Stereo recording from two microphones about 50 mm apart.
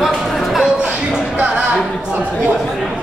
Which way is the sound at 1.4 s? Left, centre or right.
Right.